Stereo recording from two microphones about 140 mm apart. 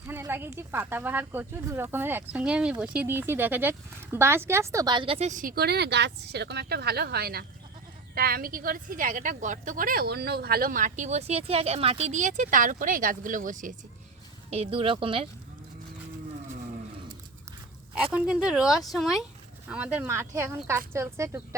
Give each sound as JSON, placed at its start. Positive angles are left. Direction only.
{"t": 0.1, "sound": "speech", "side_deg": -15}
{"t": 5.3, "sound": "speech", "side_deg": -80}
{"t": 6.8, "sound": "a woman's voice", "side_deg": -90}
{"t": 14.5, "sound": "speech", "side_deg": -45}
{"t": 17.9, "sound": "speech", "side_deg": -5}